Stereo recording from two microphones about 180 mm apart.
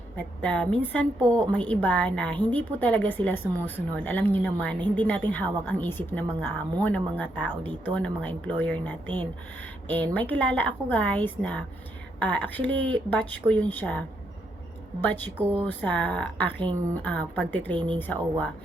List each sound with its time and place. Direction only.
0.2 s a woman's voice: 5° left (ahead or behind)
15.0 s a woman's voice: 10° left (ahead or behind)
17.7 s speech: 30° right (ahead or behind)
18.0 s a woman's voice: 10° left (ahead or behind)